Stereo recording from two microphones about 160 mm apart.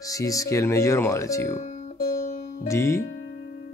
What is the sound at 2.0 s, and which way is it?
Music, 65° left (ahead or behind).